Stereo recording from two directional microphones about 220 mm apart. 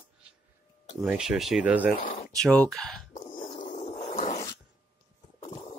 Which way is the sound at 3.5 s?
30° left (ahead or behind).